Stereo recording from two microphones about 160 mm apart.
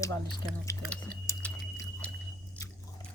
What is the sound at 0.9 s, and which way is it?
Chewing, 10° left (ahead or behind).